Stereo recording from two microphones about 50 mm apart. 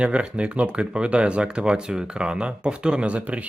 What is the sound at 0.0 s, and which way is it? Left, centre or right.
Speech, right.